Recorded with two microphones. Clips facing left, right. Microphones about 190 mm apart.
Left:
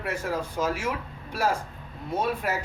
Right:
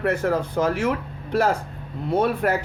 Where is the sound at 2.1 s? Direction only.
60° right (ahead or behind).